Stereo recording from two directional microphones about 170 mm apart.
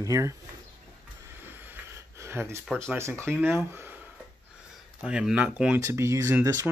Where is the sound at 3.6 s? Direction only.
10° right (ahead or behind).